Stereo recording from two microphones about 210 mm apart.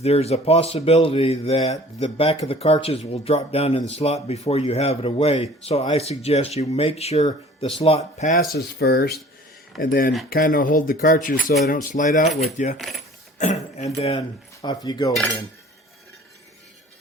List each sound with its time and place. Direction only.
0.0 s speech: 30° left (ahead or behind)
8.5 s speech: 50° left (ahead or behind)
10.2 s speech: 45° left (ahead or behind)
12.7 s speech: centre (ahead or behind)
13.4 s speech: 35° left (ahead or behind)
14.2 s speech: 20° left (ahead or behind)
15.1 s speech: 5° left (ahead or behind)